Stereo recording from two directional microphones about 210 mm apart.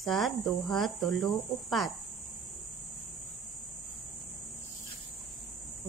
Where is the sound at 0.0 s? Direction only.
Centre (ahead or behind).